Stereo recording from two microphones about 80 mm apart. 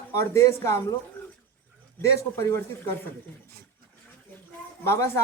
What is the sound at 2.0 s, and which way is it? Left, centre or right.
Speech, left.